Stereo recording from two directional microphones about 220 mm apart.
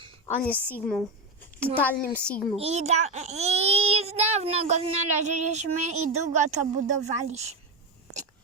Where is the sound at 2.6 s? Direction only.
30° right (ahead or behind).